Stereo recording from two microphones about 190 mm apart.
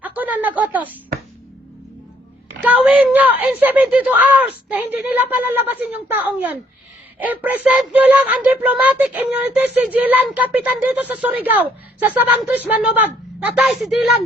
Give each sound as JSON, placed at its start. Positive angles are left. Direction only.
{"t": 0.0, "sound": "a woman's voice", "side_deg": -10}
{"t": 2.6, "sound": "speech", "side_deg": -10}